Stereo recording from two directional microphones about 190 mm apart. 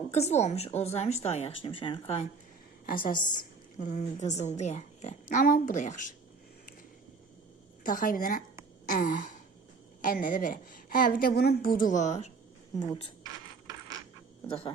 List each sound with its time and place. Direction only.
0.1 s speech: 35° left (ahead or behind)
2.8 s a woman's voice: 45° left (ahead or behind)
7.9 s a woman's voice: 45° left (ahead or behind)
12.8 s speech: 25° left (ahead or behind)
13.2 s mechanisms: 20° right (ahead or behind)